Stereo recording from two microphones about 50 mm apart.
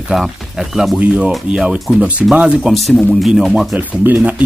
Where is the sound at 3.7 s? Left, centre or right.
Right.